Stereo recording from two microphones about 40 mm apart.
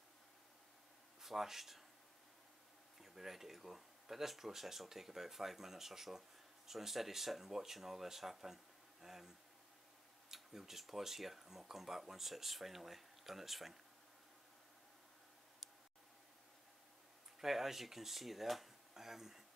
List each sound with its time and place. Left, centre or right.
1.2 s speech: centre
3.0 s speech: centre
10.3 s speech: centre
17.4 s speech: centre